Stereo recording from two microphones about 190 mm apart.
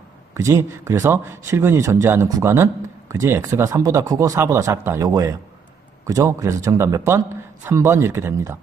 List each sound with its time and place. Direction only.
0.3 s a man's voice: 15° right (ahead or behind)